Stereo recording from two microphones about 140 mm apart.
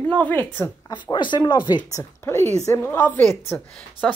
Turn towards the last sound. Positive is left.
turn(degrees=10)  # may be behind; listen again after turning